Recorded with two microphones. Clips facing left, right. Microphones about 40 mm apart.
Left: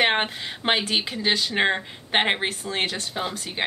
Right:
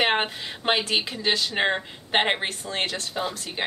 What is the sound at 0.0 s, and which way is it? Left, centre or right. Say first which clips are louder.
A woman's voice: left 1 dB; centre.